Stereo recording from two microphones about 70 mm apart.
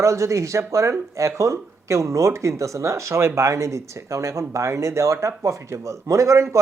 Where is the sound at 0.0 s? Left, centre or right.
Right.